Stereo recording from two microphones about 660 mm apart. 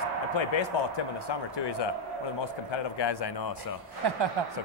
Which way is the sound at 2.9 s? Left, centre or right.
Left.